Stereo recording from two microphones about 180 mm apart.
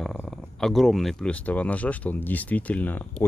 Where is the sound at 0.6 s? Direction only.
Centre (ahead or behind).